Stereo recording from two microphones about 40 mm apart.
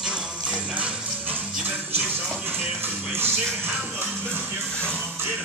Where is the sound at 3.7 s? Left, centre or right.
Right.